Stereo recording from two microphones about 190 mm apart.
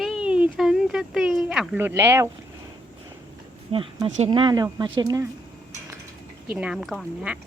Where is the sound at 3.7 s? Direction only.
30° right (ahead or behind).